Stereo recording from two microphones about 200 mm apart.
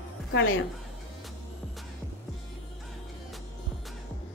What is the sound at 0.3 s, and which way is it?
Speech, 70° left (ahead or behind).